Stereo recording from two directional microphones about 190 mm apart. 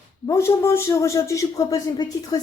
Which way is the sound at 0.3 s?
15° left (ahead or behind).